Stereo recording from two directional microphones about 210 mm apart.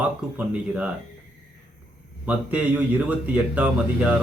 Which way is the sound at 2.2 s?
5° right (ahead or behind).